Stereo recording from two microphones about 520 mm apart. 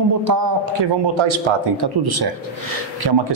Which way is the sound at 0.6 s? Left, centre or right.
Right.